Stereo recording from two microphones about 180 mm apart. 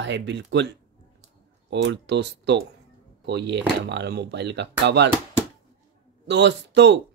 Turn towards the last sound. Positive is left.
turn(degrees=-75)  # may be behind; listen again after turning